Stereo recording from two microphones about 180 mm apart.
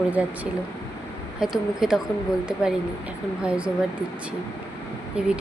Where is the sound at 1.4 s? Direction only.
5° right (ahead or behind).